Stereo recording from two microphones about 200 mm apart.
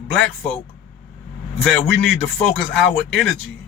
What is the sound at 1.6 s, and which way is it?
A man's voice, centre (ahead or behind).